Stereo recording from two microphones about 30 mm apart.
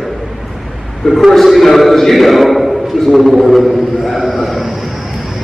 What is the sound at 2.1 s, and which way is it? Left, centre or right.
A man's voice, centre.